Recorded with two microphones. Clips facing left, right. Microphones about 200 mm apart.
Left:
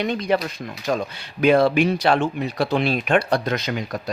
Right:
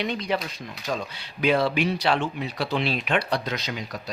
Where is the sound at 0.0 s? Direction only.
50° left (ahead or behind).